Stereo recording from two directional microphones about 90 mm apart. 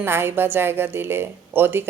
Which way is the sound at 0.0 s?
25° right (ahead or behind).